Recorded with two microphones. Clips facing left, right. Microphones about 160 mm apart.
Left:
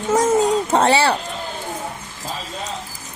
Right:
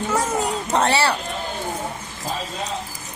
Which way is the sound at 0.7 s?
30° left (ahead or behind).